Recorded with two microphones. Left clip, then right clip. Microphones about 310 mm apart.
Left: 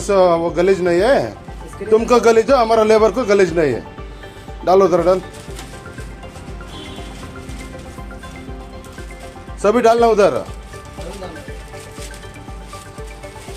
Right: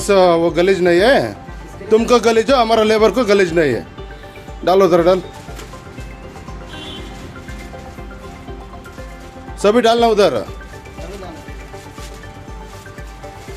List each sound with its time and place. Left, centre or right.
0.1 s speech: centre
9.6 s speech: centre